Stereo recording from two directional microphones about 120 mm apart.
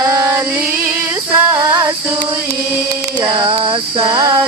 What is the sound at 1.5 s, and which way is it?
Female singing, 30° right (ahead or behind).